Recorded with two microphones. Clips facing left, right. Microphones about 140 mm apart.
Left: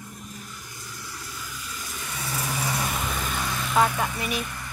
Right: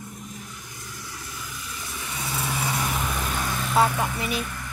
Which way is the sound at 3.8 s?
25° right (ahead or behind).